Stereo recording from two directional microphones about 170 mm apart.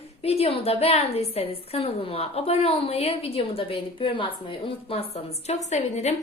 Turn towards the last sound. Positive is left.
turn(degrees=40)  # may be behind; listen again after turning